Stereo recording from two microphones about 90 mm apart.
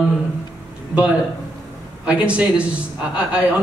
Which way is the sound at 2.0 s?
15° right (ahead or behind).